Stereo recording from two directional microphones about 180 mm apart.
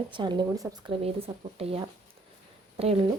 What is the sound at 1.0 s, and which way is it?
Speech, 35° right (ahead or behind).